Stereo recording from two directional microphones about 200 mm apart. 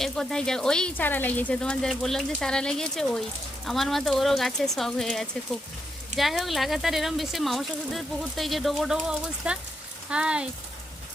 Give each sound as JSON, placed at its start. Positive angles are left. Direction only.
{"t": 0.0, "sound": "speech", "side_deg": 5}